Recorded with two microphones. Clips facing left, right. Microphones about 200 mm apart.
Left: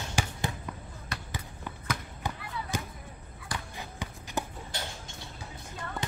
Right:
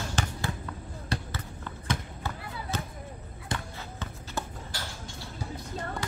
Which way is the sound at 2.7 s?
15° left (ahead or behind).